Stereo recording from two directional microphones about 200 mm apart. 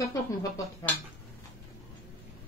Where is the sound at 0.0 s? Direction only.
15° left (ahead or behind).